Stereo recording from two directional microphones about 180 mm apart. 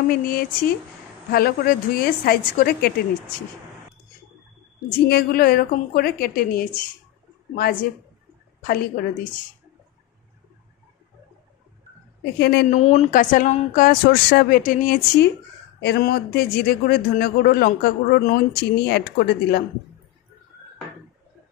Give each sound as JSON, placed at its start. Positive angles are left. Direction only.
{"t": 0.1, "sound": "a man's voice", "side_deg": 55}
{"t": 5.0, "sound": "a man's voice", "side_deg": 60}
{"t": 8.6, "sound": "speech", "side_deg": 50}
{"t": 12.4, "sound": "a man's voice", "side_deg": 65}
{"t": 12.6, "sound": "speech", "side_deg": 40}
{"t": 15.8, "sound": "a man's voice", "side_deg": 65}